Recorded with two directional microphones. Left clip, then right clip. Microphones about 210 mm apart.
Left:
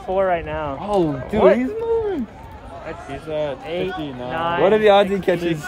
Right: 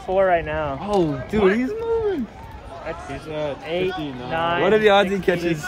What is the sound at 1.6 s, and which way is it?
Speech, 45° left (ahead or behind).